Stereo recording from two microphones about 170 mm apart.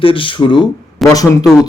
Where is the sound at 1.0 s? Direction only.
Centre (ahead or behind).